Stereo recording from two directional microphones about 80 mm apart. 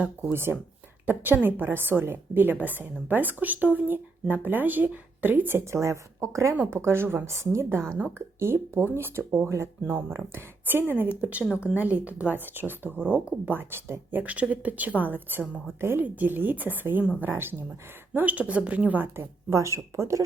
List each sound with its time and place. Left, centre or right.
0.2 s a woman's voice: right